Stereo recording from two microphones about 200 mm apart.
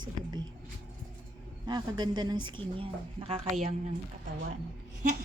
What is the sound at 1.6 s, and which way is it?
A woman's voice, 20° right (ahead or behind).